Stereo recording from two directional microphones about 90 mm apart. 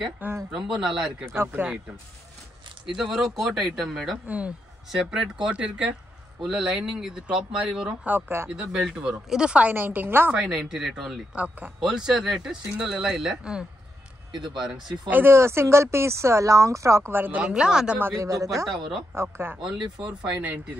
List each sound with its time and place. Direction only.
0.5 s speech: 10° right (ahead or behind)
1.2 s speech: 30° right (ahead or behind)
2.9 s speech: centre (ahead or behind)
4.3 s speech: 15° right (ahead or behind)
10.3 s speech: 5° right (ahead or behind)
15.0 s speech: 25° right (ahead or behind)
17.9 s speech: 25° right (ahead or behind)
18.2 s speech: 35° right (ahead or behind)
19.3 s speech: 25° right (ahead or behind)
19.6 s speech: 10° right (ahead or behind)